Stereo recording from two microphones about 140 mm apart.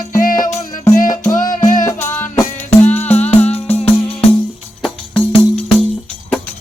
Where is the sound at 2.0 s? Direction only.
15° left (ahead or behind).